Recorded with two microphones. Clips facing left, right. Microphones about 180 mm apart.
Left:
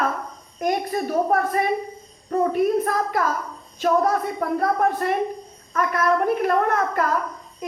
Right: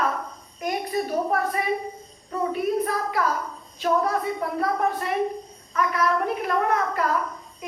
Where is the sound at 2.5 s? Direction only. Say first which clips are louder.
Left 4 dB; 50° left (ahead or behind).